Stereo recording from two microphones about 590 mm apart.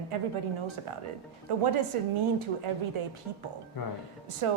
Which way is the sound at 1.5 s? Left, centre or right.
Right.